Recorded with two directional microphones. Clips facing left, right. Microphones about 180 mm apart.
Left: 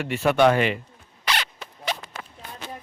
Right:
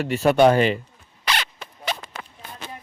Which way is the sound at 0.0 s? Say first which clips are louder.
Right 3 dB; 35° right (ahead or behind).